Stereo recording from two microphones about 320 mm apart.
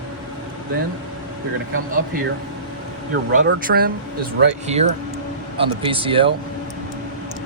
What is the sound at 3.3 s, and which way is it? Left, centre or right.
Speech, right.